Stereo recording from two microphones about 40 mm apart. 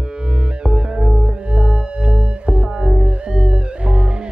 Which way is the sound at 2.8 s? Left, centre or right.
Centre.